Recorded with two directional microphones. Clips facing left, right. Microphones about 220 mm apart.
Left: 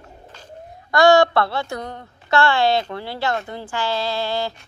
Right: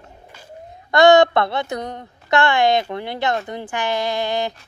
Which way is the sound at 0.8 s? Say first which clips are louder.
Right 2 dB; 20° right (ahead or behind).